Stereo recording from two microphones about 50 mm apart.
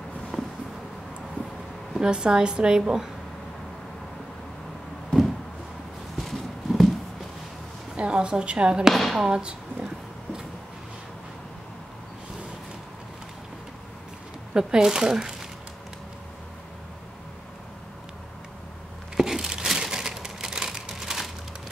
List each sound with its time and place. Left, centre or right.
2.0 s a woman's voice: centre
6.1 s horse: centre
7.9 s a woman's voice: centre
8.9 s speech: centre
9.2 s speech: centre
14.5 s a woman's voice: centre
19.1 s crumpling: centre